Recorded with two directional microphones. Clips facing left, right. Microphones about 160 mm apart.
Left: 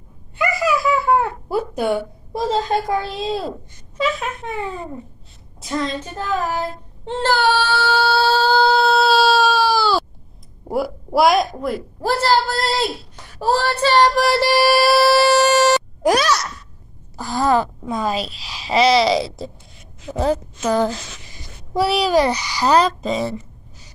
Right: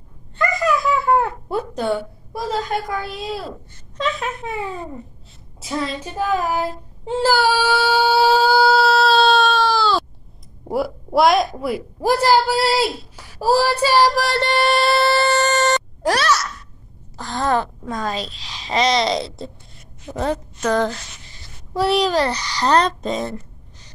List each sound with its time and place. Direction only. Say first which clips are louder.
0.4 s baby laughter: even; 5° left (ahead or behind)
2.3 s a woman's voice: left 4 dB; 25° left (ahead or behind)
3.9 s speech: left 2 dB; 5° left (ahead or behind)
5.6 s female singing: left 1 dB; 5° right (ahead or behind)
7.1 s child singing: right 1 dB; 5° right (ahead or behind)
10.7 s a woman's voice: even; centre (ahead or behind)